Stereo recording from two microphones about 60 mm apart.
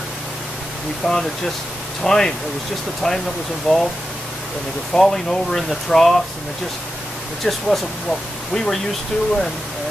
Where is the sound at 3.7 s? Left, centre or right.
Centre.